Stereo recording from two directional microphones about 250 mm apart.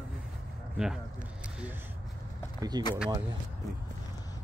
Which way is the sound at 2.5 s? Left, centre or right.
Centre.